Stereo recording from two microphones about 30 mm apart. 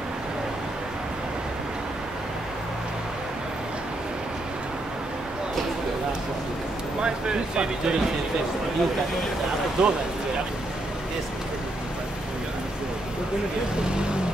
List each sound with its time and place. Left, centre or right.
7.0 s speech: right
9.8 s speech: right